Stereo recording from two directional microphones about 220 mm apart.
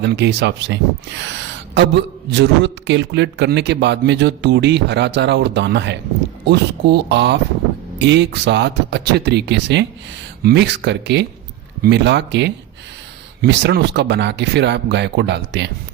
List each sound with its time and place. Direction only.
0.0 s a man's voice: 50° right (ahead or behind)